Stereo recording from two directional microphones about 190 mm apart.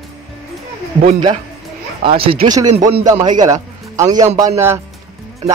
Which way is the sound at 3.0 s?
20° right (ahead or behind).